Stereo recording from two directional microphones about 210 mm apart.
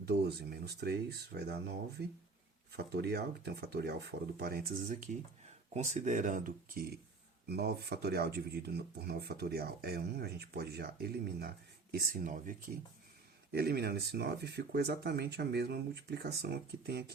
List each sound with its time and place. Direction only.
0.1 s speech: 50° right (ahead or behind)